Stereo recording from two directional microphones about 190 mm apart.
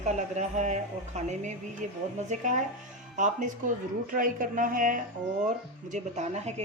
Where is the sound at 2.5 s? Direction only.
40° right (ahead or behind).